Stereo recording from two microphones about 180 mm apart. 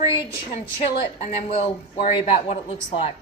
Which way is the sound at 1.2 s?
35° left (ahead or behind).